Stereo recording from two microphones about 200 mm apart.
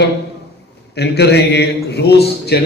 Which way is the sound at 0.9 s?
55° left (ahead or behind).